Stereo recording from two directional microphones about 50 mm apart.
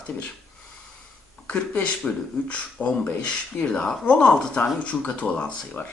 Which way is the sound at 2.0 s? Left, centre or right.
Centre.